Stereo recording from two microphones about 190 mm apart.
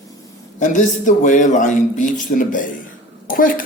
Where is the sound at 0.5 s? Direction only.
40° left (ahead or behind).